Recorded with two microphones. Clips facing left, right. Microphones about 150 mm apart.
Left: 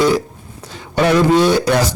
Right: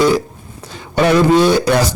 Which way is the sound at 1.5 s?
15° right (ahead or behind).